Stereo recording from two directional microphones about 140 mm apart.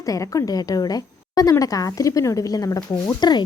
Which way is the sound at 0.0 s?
25° left (ahead or behind).